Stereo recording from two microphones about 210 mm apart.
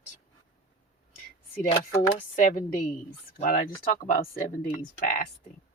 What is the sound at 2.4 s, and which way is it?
Speech, 40° left (ahead or behind).